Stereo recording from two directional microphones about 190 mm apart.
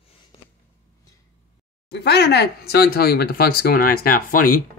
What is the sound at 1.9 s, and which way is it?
Speech, 60° left (ahead or behind).